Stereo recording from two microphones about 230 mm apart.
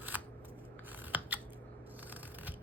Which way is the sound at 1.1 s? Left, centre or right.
Centre.